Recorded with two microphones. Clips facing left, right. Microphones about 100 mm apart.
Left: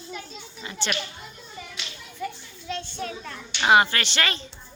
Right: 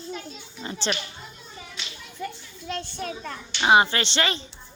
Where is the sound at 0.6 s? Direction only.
35° right (ahead or behind).